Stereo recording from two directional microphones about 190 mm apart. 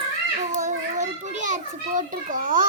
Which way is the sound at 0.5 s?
40° right (ahead or behind).